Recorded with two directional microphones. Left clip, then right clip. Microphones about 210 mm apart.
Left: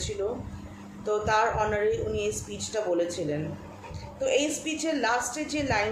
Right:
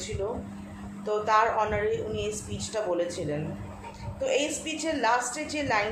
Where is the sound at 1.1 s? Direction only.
5° left (ahead or behind).